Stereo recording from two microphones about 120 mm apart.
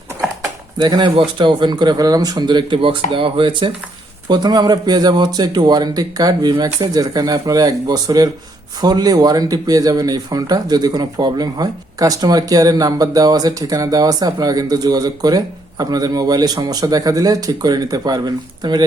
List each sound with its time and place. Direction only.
0.8 s speech: 40° right (ahead or behind)